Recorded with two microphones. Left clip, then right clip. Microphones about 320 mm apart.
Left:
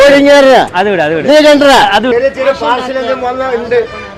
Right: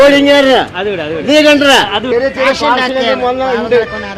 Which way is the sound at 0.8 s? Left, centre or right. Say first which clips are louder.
Left 6 dB; left.